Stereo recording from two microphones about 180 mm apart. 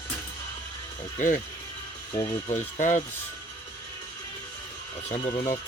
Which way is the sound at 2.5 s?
45° left (ahead or behind).